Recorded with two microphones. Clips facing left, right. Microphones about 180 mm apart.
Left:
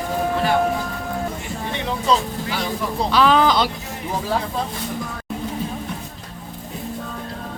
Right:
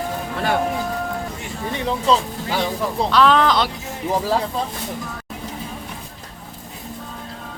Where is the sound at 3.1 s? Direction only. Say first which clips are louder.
Even; centre (ahead or behind).